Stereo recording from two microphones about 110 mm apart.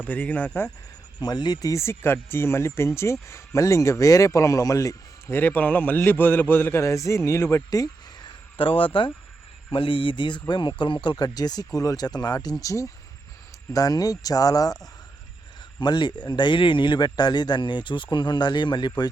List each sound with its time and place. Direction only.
0.0 s speech: 15° left (ahead or behind)
1.2 s speech: 40° left (ahead or behind)
1.7 s a man's voice: 25° left (ahead or behind)
5.3 s a man's voice: 15° left (ahead or behind); by 8.3 s 35° left (ahead or behind)
8.5 s a man's voice: 55° left (ahead or behind); by 14.8 s 35° left (ahead or behind)
15.8 s a man's voice: 40° left (ahead or behind)